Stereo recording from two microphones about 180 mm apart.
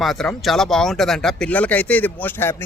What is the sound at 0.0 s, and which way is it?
Speech, centre (ahead or behind).